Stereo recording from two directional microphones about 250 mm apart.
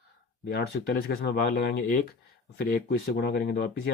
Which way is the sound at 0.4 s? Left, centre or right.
Left.